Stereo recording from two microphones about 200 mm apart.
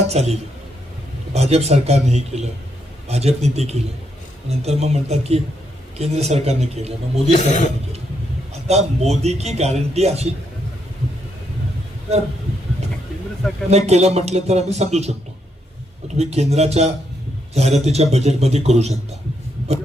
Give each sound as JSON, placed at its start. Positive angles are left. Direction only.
{"t": 0.1, "sound": "speech", "side_deg": -30}
{"t": 7.3, "sound": "speech", "side_deg": 35}
{"t": 8.6, "sound": "speech", "side_deg": -35}
{"t": 13.7, "sound": "speech", "side_deg": -35}
{"t": 16.1, "sound": "speech", "side_deg": -30}